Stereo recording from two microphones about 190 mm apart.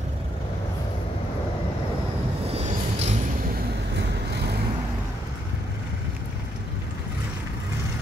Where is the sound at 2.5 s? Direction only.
35° right (ahead or behind).